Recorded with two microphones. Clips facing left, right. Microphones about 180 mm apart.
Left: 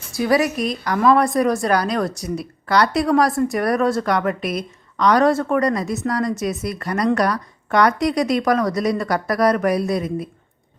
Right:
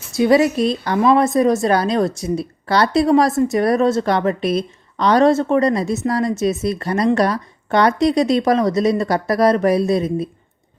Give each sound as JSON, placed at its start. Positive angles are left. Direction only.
{"t": 0.1, "sound": "a woman's voice", "side_deg": -25}